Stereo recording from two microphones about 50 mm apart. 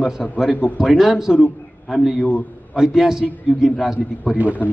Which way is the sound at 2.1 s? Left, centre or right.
Left.